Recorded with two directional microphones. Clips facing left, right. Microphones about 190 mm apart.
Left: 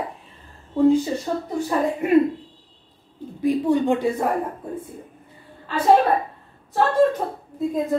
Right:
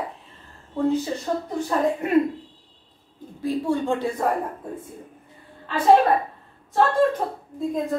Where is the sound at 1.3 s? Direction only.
10° left (ahead or behind).